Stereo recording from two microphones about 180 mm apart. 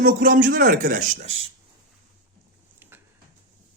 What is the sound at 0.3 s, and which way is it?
Speech, 50° right (ahead or behind).